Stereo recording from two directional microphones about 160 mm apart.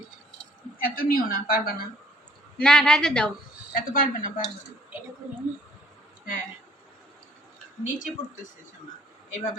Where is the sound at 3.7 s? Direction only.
60° left (ahead or behind).